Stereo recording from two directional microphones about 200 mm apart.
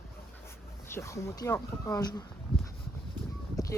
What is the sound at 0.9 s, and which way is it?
Speech, 15° left (ahead or behind).